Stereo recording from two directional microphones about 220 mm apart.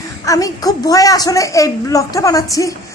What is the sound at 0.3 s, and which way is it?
A woman's voice, 15° left (ahead or behind).